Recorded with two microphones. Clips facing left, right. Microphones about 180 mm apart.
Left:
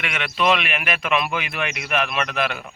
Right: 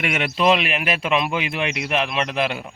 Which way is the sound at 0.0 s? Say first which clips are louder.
Right 3 dB; 35° right (ahead or behind).